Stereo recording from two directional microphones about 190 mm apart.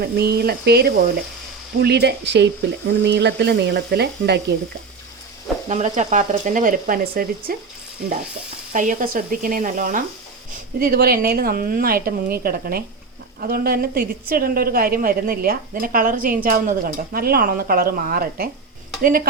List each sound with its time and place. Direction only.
0.0 s speech: 55° right (ahead or behind)
5.6 s a woman's voice: 40° right (ahead or behind)
8.7 s a woman's voice: 45° right (ahead or behind)